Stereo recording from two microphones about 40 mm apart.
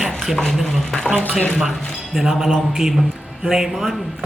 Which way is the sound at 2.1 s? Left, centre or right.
Centre.